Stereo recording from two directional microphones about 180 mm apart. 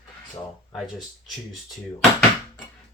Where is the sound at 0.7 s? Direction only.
Centre (ahead or behind).